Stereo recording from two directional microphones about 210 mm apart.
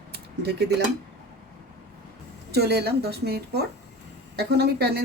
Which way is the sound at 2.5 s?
50° right (ahead or behind).